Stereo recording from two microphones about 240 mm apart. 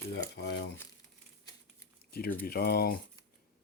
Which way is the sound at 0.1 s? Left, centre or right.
Left.